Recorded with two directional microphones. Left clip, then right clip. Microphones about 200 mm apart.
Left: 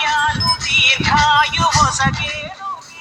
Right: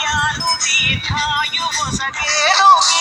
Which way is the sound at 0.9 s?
25° left (ahead or behind).